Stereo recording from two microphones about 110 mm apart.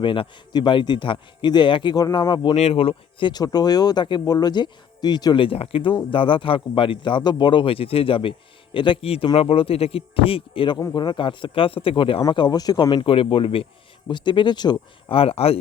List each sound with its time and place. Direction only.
0.0 s a man's voice: 50° left (ahead or behind)
2.6 s a man's voice: 70° left (ahead or behind)
12.3 s a man's voice: 40° left (ahead or behind); by 13.7 s 55° left (ahead or behind)
14.1 s a man's voice: 45° left (ahead or behind)
15.1 s speech: 60° left (ahead or behind)